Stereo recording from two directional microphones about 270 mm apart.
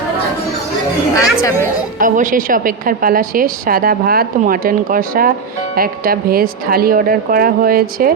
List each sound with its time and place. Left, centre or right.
1.5 s a woman's voice: centre
2.0 s a woman's voice: right